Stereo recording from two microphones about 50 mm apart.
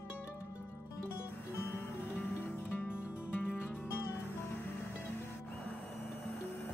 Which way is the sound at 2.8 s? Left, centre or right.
Left.